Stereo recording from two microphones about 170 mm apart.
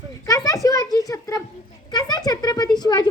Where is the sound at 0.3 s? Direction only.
20° left (ahead or behind).